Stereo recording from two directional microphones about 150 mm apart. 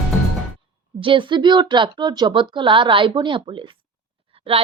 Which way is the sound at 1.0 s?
35° right (ahead or behind).